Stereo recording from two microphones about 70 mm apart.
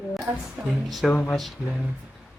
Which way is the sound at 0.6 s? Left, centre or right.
Centre.